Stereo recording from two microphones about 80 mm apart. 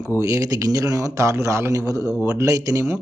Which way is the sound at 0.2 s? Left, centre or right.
Right.